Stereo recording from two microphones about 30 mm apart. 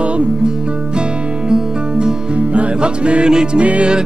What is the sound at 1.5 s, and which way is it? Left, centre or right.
Music, right.